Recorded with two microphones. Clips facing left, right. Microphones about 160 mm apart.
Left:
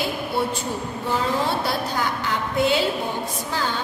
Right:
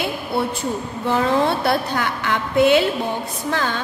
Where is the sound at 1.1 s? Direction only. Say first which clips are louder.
Right 5 dB; 65° right (ahead or behind).